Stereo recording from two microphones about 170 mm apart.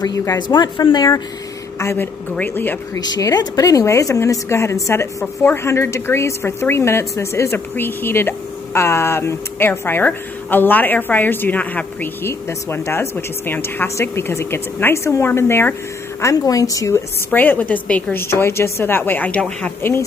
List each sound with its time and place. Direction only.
0.0 s a woman's voice: 20° left (ahead or behind)
3.0 s a woman's voice: 20° left (ahead or behind)